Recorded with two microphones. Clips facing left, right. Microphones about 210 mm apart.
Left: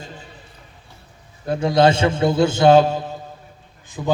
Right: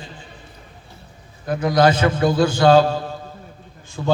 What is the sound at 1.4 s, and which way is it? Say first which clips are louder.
A man's voice: left 1 dB; 30° left (ahead or behind).